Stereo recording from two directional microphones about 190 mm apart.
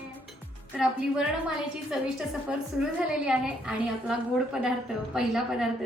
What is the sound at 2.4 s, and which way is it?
A woman's voice, 5° right (ahead or behind).